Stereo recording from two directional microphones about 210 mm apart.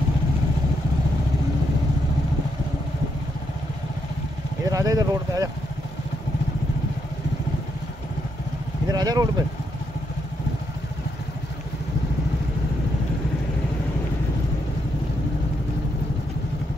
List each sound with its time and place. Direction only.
4.6 s speech: 15° right (ahead or behind)
8.8 s vehicle: 20° right (ahead or behind)